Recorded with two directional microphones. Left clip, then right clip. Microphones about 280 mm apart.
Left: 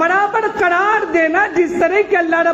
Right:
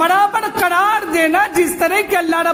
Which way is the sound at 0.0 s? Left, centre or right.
Right.